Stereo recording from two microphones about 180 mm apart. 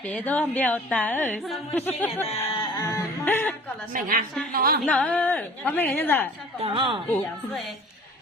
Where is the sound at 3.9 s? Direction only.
50° right (ahead or behind).